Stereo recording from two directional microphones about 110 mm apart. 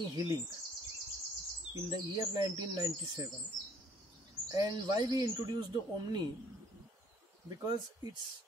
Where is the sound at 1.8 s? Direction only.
35° right (ahead or behind).